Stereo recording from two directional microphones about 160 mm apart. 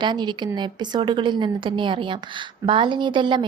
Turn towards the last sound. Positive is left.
turn(degrees=-30)  # may be behind; listen again after turning